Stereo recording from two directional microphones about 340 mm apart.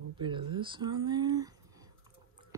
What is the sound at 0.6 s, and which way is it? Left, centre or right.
Speech, centre.